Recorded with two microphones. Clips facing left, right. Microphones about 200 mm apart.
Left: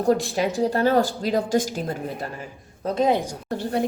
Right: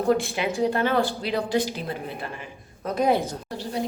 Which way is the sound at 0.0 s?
40° left (ahead or behind).